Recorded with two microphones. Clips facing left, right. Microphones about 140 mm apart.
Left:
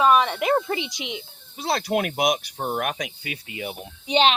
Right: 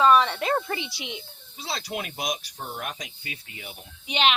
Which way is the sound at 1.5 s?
55° left (ahead or behind).